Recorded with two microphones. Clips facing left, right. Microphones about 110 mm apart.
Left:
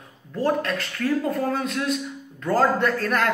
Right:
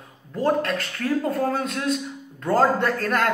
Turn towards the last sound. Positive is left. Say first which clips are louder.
# even
turn(degrees=-40)  # may be behind; listen again after turning